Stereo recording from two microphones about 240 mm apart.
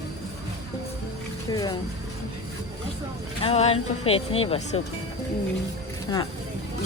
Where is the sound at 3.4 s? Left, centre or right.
Left.